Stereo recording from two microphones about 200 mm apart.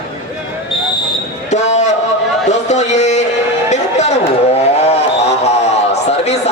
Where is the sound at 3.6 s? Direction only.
35° left (ahead or behind).